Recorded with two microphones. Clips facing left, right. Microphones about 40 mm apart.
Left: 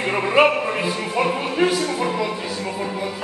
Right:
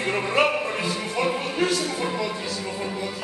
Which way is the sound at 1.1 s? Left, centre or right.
Centre.